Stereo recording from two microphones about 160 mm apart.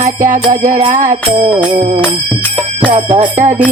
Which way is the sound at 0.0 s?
55° right (ahead or behind).